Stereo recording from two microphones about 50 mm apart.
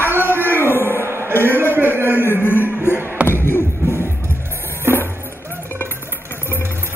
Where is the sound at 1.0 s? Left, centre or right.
Right.